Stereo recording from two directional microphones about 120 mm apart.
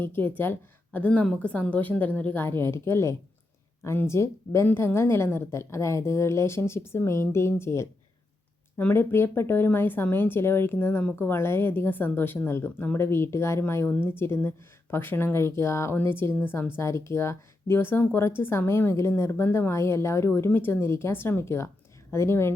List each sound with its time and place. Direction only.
0.0 s a woman's voice: 15° left (ahead or behind)